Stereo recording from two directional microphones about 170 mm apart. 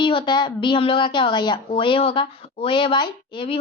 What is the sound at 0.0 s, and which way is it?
A woman's voice, 30° left (ahead or behind).